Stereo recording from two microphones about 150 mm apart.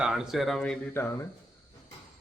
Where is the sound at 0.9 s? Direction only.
15° left (ahead or behind).